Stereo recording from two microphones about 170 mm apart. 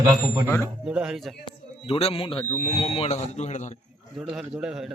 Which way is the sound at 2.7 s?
35° left (ahead or behind).